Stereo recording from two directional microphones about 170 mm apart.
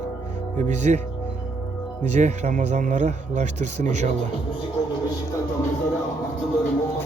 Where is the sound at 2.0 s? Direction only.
45° right (ahead or behind).